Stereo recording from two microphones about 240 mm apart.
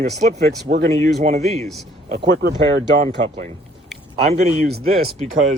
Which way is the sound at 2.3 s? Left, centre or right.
Right.